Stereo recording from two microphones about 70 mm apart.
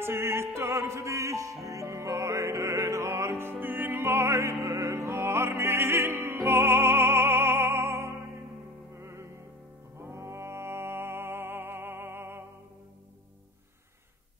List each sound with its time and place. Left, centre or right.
0.0 s music: right
4.3 s music: right